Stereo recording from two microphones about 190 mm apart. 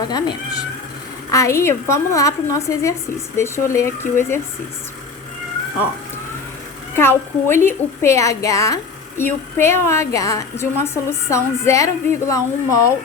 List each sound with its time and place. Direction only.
0.1 s a woman's voice: 20° left (ahead or behind)
6.9 s a woman's voice: 10° left (ahead or behind)